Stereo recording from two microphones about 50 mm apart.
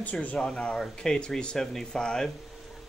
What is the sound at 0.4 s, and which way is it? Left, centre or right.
Speech, centre.